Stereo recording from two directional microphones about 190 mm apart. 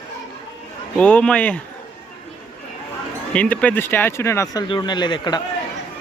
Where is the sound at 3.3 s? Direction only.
5° left (ahead or behind); by 5.4 s 25° left (ahead or behind).